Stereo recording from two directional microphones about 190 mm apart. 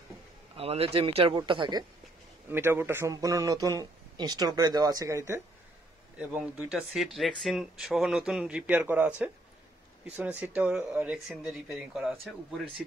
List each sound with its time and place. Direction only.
0.6 s speech: 30° right (ahead or behind)
2.5 s speech: 10° right (ahead or behind)